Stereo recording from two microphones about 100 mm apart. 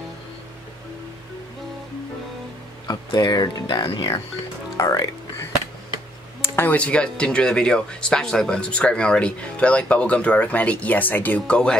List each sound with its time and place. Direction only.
3.1 s speech: 45° left (ahead or behind)
3.6 s speech: 65° left (ahead or behind)
4.7 s music: 35° left (ahead or behind)
6.4 s speech: 20° left (ahead or behind)